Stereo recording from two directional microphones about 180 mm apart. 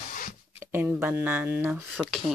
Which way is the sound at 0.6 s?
10° right (ahead or behind).